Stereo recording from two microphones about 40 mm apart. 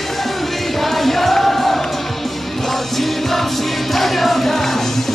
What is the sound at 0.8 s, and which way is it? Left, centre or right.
Music, centre.